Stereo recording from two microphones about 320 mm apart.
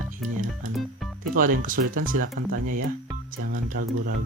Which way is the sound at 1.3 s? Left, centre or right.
Right.